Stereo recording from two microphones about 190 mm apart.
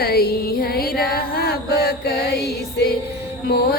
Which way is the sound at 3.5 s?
55° left (ahead or behind).